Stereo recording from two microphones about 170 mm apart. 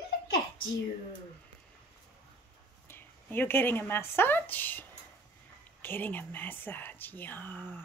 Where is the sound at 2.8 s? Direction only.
10° left (ahead or behind).